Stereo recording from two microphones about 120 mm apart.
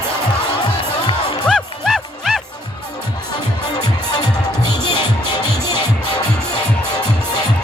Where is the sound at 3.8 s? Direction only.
35° left (ahead or behind).